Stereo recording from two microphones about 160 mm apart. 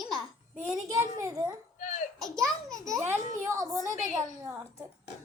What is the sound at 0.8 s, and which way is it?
Speech, 20° right (ahead or behind).